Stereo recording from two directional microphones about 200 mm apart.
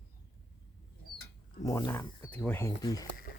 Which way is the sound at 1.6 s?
15° left (ahead or behind).